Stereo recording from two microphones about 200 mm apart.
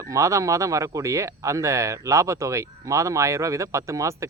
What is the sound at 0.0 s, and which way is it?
Speech, 15° right (ahead or behind).